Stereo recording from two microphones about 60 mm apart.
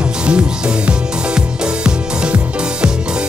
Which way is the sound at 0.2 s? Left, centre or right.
Centre.